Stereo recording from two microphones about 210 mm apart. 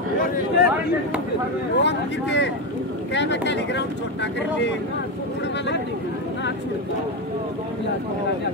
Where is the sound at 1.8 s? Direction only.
55° left (ahead or behind).